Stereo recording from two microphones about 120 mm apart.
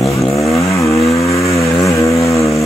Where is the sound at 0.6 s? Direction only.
25° left (ahead or behind).